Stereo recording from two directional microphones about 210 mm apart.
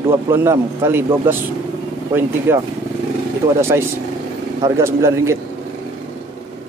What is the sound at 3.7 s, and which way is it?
A man's voice, 10° right (ahead or behind).